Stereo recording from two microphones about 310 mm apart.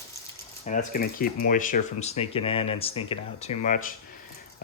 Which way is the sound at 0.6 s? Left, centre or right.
Left.